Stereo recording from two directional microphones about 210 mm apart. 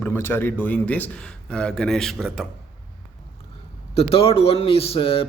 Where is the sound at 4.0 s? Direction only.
30° left (ahead or behind).